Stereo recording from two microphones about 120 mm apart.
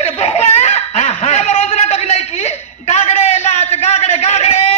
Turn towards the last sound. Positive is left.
turn(degrees=65)  # may be behind; listen again after turning